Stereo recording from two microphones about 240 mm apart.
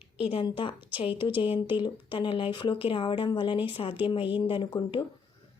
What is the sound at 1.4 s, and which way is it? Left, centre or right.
Speech, left.